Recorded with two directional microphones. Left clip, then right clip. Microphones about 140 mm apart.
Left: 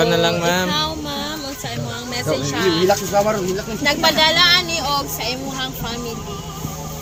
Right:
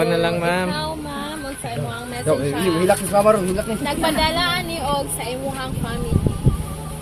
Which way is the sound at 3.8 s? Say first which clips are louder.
Left 6 dB; 90° left.